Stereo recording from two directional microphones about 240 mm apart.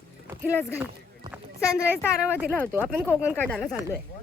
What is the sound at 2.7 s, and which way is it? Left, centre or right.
Speech, centre.